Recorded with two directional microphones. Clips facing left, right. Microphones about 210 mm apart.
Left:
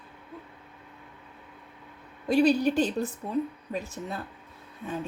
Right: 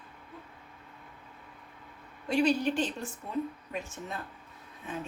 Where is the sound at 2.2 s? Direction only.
35° left (ahead or behind).